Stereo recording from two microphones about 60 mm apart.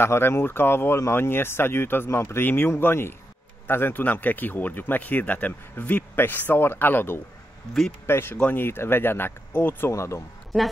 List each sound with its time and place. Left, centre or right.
0.0 s speech: left
9.9 s speech: left